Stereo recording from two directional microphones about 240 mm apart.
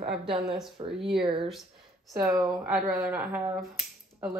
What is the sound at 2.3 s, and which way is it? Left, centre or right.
Speech, centre.